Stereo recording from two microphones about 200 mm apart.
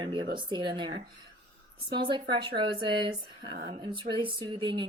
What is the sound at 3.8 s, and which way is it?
Speech, 25° right (ahead or behind).